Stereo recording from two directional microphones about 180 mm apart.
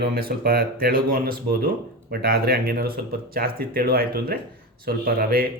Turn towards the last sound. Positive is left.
turn(degrees=-55)  # may be behind; listen again after turning